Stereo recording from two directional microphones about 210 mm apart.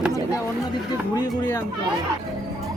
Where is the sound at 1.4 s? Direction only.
15° left (ahead or behind).